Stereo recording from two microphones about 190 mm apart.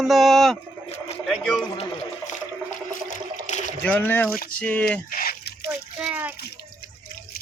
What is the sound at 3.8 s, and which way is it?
Speech, 10° left (ahead or behind).